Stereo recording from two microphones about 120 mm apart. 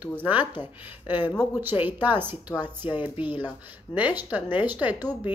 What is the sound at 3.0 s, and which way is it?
Speech, 15° right (ahead or behind).